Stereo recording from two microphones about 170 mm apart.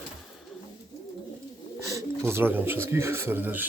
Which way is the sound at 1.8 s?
20° right (ahead or behind).